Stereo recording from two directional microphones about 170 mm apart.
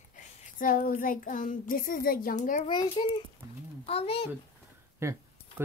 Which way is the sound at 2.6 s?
25° left (ahead or behind).